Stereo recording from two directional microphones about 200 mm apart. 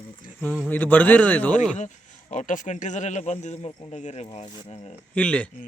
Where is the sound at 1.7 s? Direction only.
35° left (ahead or behind).